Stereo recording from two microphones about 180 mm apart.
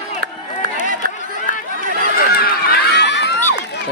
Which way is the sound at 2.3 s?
60° left (ahead or behind).